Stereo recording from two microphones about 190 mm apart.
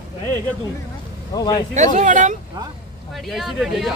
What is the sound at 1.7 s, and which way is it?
Speech, 40° right (ahead or behind).